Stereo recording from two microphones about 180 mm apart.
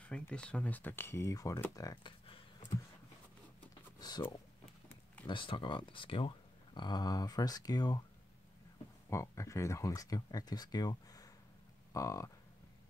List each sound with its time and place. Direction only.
0.0 s speech: 5° left (ahead or behind); by 2.8 s 25° left (ahead or behind)
5.2 s speech: 30° left (ahead or behind)
9.1 s speech: 15° left (ahead or behind)